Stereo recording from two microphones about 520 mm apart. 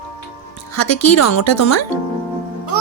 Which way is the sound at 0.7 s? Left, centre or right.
Left.